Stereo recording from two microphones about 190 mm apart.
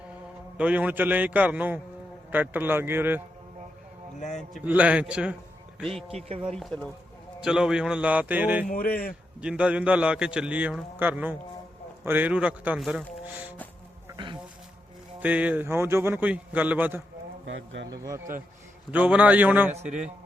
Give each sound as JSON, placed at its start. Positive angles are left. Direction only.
{"t": 0.5, "sound": "a man's voice", "side_deg": -5}
{"t": 4.4, "sound": "a man's voice", "side_deg": -5}
{"t": 6.1, "sound": "speech", "side_deg": -30}
{"t": 6.5, "sound": "a man's voice", "side_deg": 5}
{"t": 8.6, "sound": "a man's voice", "side_deg": 50}
{"t": 9.4, "sound": "a man's voice", "side_deg": -5}
{"t": 14.1, "sound": "bee", "side_deg": -25}
{"t": 15.2, "sound": "a man's voice", "side_deg": -5}
{"t": 17.4, "sound": "speech", "side_deg": -80}
{"t": 17.8, "sound": "a man's voice", "side_deg": -20}
{"t": 18.9, "sound": "a man's voice", "side_deg": -5}
{"t": 19.7, "sound": "speech", "side_deg": -35}